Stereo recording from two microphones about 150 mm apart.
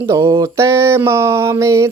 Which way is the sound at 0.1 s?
20° right (ahead or behind).